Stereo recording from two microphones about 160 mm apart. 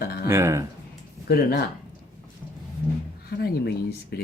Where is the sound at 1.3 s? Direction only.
70° left (ahead or behind).